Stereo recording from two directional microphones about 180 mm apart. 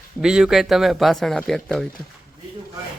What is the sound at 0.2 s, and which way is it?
Speech, 5° right (ahead or behind).